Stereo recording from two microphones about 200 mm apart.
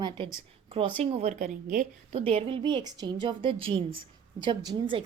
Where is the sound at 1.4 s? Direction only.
45° right (ahead or behind).